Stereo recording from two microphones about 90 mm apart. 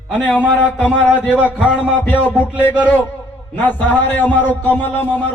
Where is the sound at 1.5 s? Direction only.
10° right (ahead or behind).